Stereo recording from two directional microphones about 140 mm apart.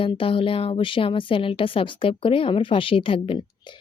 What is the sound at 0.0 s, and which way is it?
A woman's voice, 40° left (ahead or behind).